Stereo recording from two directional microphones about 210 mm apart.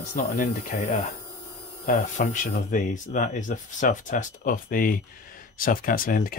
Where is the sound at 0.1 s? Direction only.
35° left (ahead or behind).